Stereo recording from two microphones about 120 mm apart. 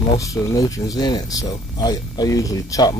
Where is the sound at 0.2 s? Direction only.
25° left (ahead or behind).